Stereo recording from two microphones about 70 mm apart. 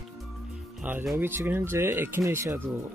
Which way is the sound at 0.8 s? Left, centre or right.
Right.